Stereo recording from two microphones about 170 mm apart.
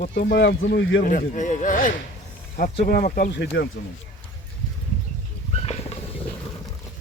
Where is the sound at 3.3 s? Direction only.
80° left.